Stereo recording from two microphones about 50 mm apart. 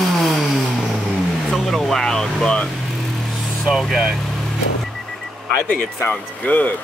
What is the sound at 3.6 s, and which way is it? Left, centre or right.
Speech, centre.